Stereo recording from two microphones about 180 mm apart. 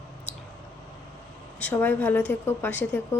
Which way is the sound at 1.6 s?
10° left (ahead or behind).